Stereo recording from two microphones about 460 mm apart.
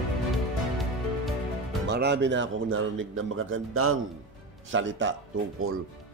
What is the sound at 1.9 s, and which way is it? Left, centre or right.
A man's voice, right.